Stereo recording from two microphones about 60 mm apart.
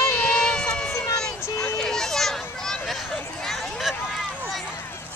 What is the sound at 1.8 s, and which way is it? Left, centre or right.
Children playing, centre.